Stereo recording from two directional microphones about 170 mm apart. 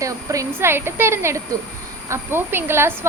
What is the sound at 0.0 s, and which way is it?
Speech, 20° right (ahead or behind).